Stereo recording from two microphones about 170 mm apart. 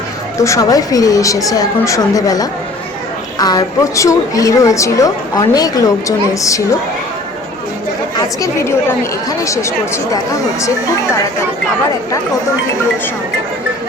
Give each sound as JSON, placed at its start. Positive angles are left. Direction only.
{"t": 0.3, "sound": "a woman's voice", "side_deg": 20}
{"t": 8.4, "sound": "speech", "side_deg": 15}